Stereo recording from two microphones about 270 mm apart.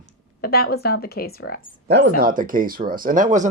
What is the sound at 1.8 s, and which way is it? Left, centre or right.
Speech, right.